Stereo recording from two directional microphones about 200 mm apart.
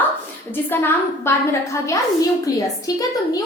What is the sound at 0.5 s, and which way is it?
A woman's voice, 10° left (ahead or behind).